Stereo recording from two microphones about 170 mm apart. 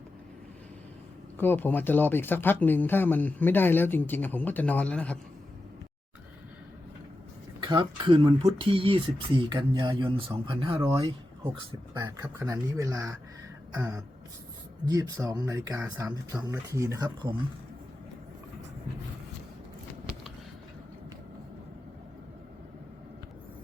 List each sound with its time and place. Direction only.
1.4 s speech: 10° left (ahead or behind)
7.6 s speech: 25° right (ahead or behind)